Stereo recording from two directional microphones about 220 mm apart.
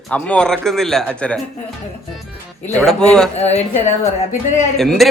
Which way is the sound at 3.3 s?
30° left (ahead or behind).